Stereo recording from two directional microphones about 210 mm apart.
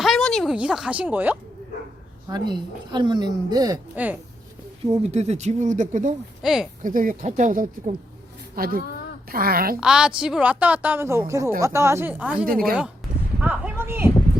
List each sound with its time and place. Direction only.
0.0 s a sound: centre (ahead or behind)
2.3 s a woman's voice: 20° right (ahead or behind)
5.0 s speech: 30° right (ahead or behind)
6.4 s speech: centre (ahead or behind)
6.8 s a woman's voice: 40° right (ahead or behind)
9.8 s speech: 5° right (ahead or behind)
13.4 s a sound: 10° right (ahead or behind)